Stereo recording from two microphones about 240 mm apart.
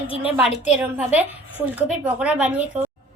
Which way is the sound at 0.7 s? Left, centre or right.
Centre.